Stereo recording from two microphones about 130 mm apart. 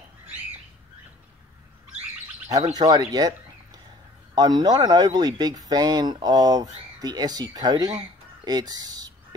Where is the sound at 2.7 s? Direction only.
30° right (ahead or behind).